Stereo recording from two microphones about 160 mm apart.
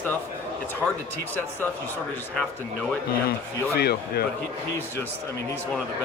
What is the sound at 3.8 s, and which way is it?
Speech, 80° left.